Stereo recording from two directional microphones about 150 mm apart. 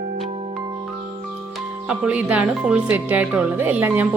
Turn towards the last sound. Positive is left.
turn(degrees=-10)  # may be behind; listen again after turning